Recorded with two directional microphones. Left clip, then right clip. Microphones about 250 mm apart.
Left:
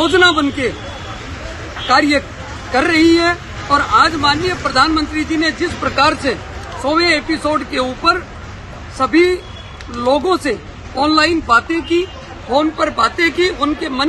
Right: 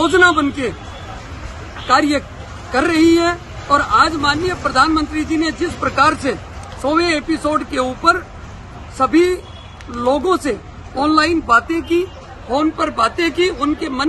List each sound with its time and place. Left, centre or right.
0.0 s a woman's voice: right
1.9 s a woman's voice: right